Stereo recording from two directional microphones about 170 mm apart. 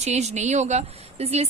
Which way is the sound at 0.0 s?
40° right (ahead or behind).